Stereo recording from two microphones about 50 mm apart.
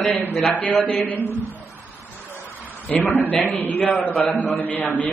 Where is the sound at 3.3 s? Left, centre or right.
Left.